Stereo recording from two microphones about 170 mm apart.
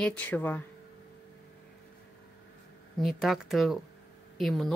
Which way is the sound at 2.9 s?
Centre (ahead or behind).